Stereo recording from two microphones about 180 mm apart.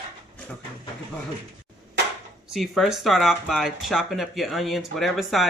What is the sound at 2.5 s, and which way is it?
Speech, centre (ahead or behind).